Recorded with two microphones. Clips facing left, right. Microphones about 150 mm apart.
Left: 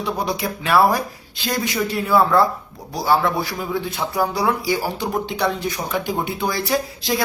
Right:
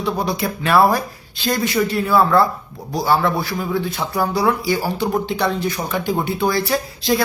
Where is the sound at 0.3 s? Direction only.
10° left (ahead or behind).